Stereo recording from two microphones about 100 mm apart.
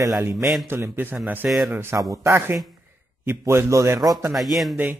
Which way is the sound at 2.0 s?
35° right (ahead or behind).